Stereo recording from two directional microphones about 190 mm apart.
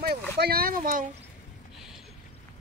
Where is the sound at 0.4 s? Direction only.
50° right (ahead or behind).